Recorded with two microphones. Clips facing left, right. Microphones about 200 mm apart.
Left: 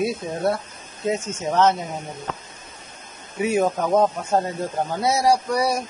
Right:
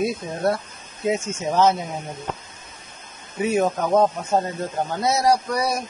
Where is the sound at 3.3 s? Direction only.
5° left (ahead or behind).